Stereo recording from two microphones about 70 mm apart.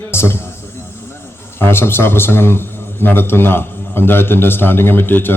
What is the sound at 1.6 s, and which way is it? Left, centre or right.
A man's voice, left.